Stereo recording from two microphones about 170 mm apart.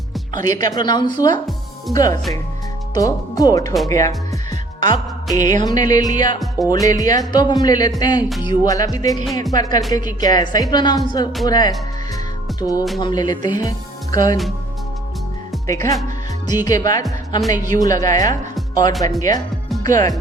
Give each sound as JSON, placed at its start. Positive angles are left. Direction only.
{"t": 0.4, "sound": "speech", "side_deg": 20}
{"t": 4.8, "sound": "music", "side_deg": 25}
{"t": 5.6, "sound": "speech", "side_deg": 20}
{"t": 12.5, "sound": "music", "side_deg": 20}
{"t": 13.0, "sound": "speech", "side_deg": 25}
{"t": 15.6, "sound": "speech", "side_deg": 20}